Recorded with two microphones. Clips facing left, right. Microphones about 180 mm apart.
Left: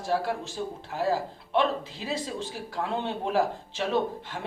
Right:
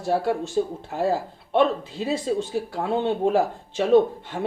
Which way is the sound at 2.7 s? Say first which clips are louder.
Right 6 dB; 50° right (ahead or behind).